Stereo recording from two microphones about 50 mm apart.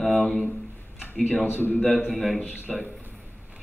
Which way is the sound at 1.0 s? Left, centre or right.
Centre.